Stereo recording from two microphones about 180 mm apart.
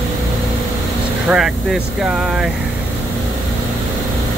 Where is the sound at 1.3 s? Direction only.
Centre (ahead or behind).